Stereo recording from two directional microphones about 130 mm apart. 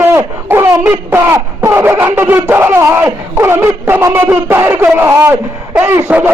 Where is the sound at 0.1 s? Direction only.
20° right (ahead or behind).